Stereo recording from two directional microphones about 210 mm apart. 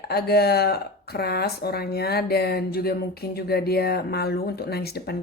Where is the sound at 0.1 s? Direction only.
50° left (ahead or behind).